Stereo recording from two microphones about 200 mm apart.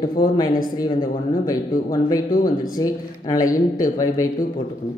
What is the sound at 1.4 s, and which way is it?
Speech, 20° left (ahead or behind).